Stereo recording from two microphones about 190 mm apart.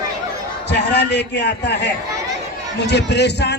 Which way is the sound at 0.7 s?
65° left (ahead or behind).